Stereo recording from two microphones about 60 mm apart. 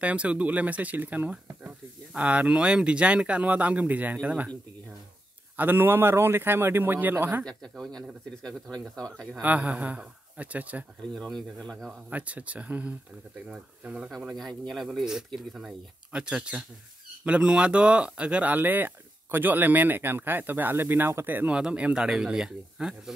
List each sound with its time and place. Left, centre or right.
0.0 s speech: right
5.6 s speech: right
7.4 s speech: centre
9.4 s speech: right
11.1 s speech: centre
12.1 s speech: right
15.0 s speech: centre
16.1 s speech: centre; by 21.1 s right
21.5 s speech: centre